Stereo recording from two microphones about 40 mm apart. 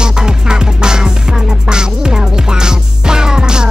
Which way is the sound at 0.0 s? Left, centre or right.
Centre.